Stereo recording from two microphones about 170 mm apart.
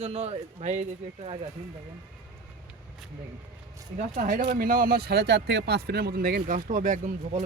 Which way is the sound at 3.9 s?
55° right (ahead or behind).